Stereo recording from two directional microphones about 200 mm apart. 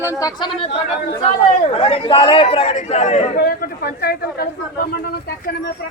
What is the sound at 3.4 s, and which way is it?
Speech, 50° left (ahead or behind).